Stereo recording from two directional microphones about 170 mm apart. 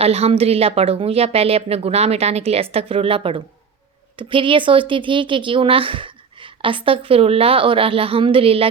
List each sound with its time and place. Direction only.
0.0 s a woman's voice: 35° right (ahead or behind)